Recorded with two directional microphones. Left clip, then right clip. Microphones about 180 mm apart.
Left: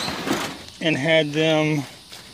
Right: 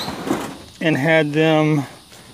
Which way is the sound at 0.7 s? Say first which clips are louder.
Right 3 dB; 25° right (ahead or behind).